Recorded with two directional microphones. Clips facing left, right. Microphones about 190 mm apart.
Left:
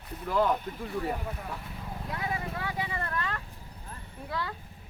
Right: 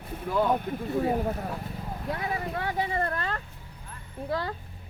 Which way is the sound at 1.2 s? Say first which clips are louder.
Right 8 dB; 45° right (ahead or behind).